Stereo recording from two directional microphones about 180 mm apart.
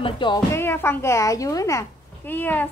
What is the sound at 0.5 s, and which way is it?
A child's voice, 15° left (ahead or behind).